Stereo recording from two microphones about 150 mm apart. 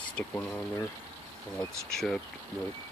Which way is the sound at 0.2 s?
15° left (ahead or behind).